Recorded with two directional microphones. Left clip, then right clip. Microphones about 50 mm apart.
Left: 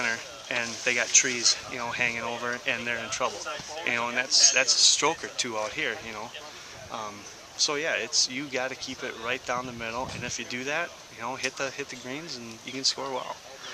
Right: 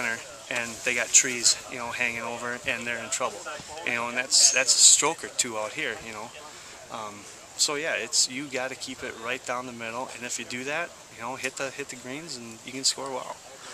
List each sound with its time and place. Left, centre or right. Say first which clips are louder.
0.0 s a sound: left 1 dB; centre
0.9 s speech: even; centre
3.4 s speech: left 2 dB; left
3.8 s speech: left 1 dB; centre
7.5 s speech: even; centre